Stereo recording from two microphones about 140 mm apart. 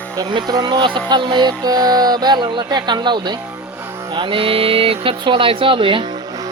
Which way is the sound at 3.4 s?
15° right (ahead or behind).